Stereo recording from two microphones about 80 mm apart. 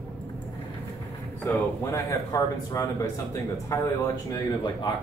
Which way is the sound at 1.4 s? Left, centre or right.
Left.